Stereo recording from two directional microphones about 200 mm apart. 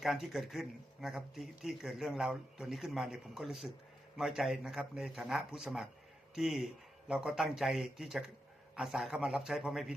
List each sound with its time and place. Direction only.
0.0 s speech: centre (ahead or behind)